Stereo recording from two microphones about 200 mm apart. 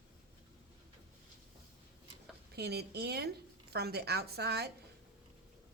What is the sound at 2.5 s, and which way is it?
Speech, 55° right (ahead or behind).